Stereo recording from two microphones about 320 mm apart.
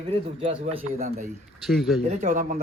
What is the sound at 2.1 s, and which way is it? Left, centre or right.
Speech, right.